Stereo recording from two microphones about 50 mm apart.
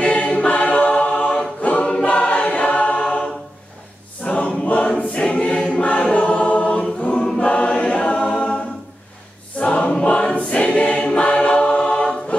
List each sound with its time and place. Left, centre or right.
0.0 s a capella: left
2.0 s choir: left
3.0 s a capella: centre
4.2 s choir: left
7.2 s choir: centre
7.4 s choir: left
9.6 s choir: left